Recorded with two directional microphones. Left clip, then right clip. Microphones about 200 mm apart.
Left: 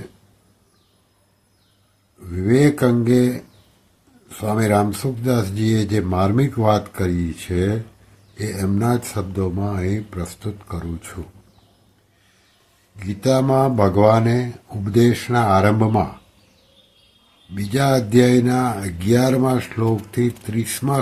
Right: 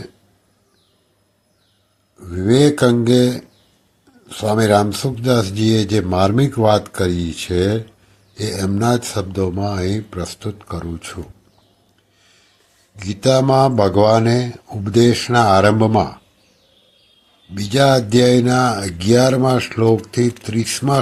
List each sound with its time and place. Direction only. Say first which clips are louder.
2.2 s speech: right 3 dB; 15° right (ahead or behind)
13.0 s speech: right 4 dB; 15° right (ahead or behind)
17.5 s speech: right 5 dB; 15° right (ahead or behind)